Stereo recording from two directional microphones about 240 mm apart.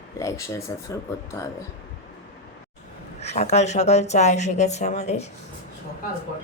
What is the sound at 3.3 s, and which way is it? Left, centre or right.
A woman's voice, left.